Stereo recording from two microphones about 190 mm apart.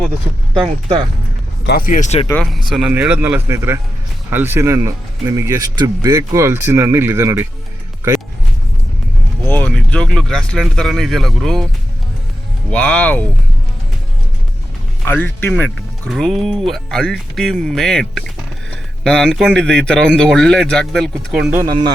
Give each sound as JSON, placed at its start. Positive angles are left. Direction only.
{"t": 1.6, "sound": "speech", "side_deg": 50}
{"t": 2.6, "sound": "speech", "side_deg": 0}
{"t": 9.5, "sound": "speech", "side_deg": 5}
{"t": 12.7, "sound": "speech", "side_deg": 5}
{"t": 15.0, "sound": "speech", "side_deg": 10}
{"t": 21.7, "sound": "speech", "side_deg": -20}